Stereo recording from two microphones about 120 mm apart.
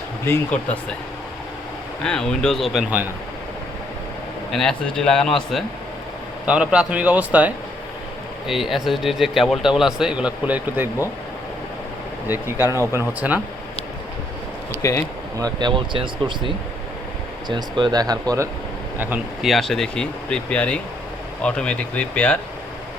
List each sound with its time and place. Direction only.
0.3 s speech: 15° left (ahead or behind)
2.0 s speech: 5° left (ahead or behind)
4.5 s speech: 5° left (ahead or behind)
6.4 s a man's voice: 10° right (ahead or behind)
12.3 s a man's voice: 20° right (ahead or behind)
14.8 s speech: 25° left (ahead or behind)
15.4 s speech: 35° right (ahead or behind)
17.5 s speech: 40° right (ahead or behind)
19.4 s speech: centre (ahead or behind)